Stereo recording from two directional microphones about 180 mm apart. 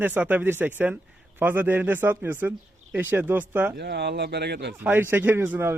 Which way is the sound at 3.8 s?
70° right (ahead or behind).